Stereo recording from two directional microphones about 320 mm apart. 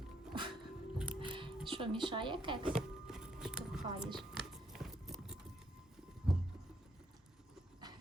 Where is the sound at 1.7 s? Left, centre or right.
Centre.